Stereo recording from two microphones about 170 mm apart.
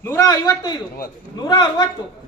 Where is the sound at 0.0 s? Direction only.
15° left (ahead or behind).